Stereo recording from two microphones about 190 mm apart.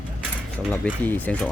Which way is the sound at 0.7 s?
10° left (ahead or behind).